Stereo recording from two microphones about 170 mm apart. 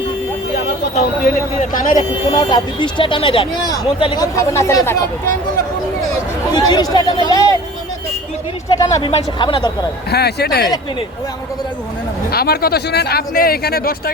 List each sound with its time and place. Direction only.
1.7 s speech: 55° left (ahead or behind)
2.3 s speech: 25° left (ahead or behind)
6.5 s speech: 25° left (ahead or behind)
8.8 s speech: 20° left (ahead or behind)
9.0 s speech: 30° left (ahead or behind)
10.1 s speech: 70° left (ahead or behind)
12.3 s speech: 65° left (ahead or behind)